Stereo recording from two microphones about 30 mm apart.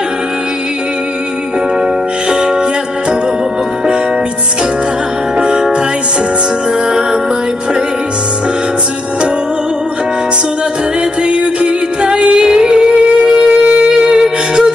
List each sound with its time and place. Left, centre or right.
2.2 s music: right
5.4 s music: right
6.9 s music: centre
11.2 s music: right
13.5 s shofar: right
14.2 s music: right